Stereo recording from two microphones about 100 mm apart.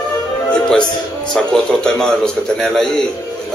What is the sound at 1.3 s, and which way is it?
A man's voice, 5° left (ahead or behind).